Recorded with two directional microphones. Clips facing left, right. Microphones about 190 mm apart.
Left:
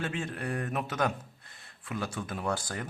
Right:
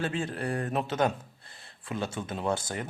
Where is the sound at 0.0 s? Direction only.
35° right (ahead or behind).